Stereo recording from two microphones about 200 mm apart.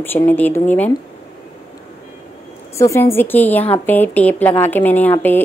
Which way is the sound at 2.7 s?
15° left (ahead or behind).